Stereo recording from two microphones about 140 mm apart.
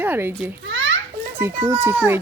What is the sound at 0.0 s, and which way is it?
A child's voice, 15° right (ahead or behind).